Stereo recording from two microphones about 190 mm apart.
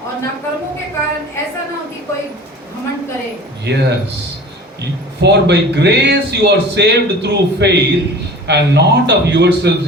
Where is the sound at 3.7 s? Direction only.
65° right (ahead or behind).